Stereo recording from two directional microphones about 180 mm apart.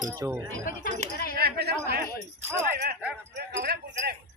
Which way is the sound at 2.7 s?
65° right (ahead or behind).